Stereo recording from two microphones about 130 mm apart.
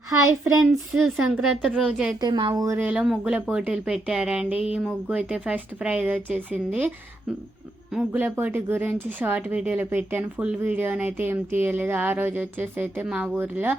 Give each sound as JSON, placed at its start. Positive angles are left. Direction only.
{"t": 0.1, "sound": "a child's voice", "side_deg": -25}
{"t": 0.6, "sound": "speech", "side_deg": 0}
{"t": 2.2, "sound": "a woman's voice", "side_deg": -35}
{"t": 2.6, "sound": "speech", "side_deg": -15}
{"t": 8.1, "sound": "speech", "side_deg": -15}